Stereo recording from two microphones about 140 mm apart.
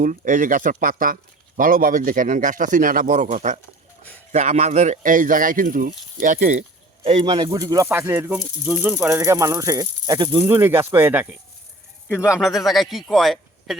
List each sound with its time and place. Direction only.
0.0 s speech: 70° right (ahead or behind)
7.0 s speech: 40° right (ahead or behind)
10.4 s speech: 15° right (ahead or behind)
12.4 s speech: centre (ahead or behind)